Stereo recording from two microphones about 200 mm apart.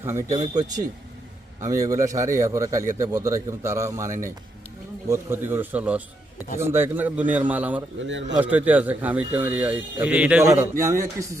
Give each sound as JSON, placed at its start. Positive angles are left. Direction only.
{"t": 0.0, "sound": "speech", "side_deg": -15}
{"t": 1.6, "sound": "speech", "side_deg": -15}
{"t": 8.0, "sound": "a man's voice", "side_deg": -65}
{"t": 8.4, "sound": "speech", "side_deg": -10}